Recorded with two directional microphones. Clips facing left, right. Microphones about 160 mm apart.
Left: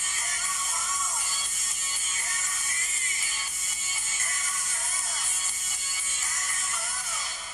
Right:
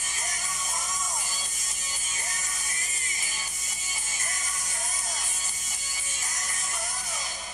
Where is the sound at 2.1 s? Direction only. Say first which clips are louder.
Right 1 dB; 15° right (ahead or behind).